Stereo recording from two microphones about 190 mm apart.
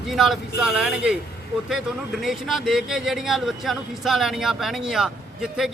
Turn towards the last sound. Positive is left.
turn(degrees=-5)  # may be behind; listen again after turning